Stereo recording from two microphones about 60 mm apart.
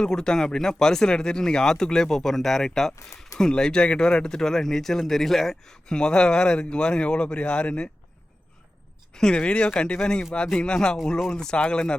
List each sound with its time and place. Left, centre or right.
0.0 s speech: centre
9.1 s speech: centre